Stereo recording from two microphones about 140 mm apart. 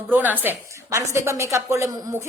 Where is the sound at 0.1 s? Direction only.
15° right (ahead or behind).